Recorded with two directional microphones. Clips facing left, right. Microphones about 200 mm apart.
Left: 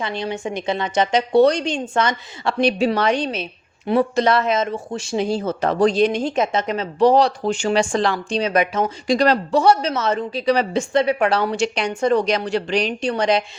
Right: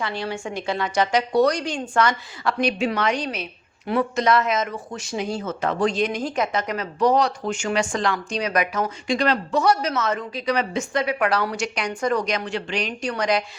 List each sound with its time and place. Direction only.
0.0 s speech: 20° left (ahead or behind)
9.0 s speech: 40° left (ahead or behind)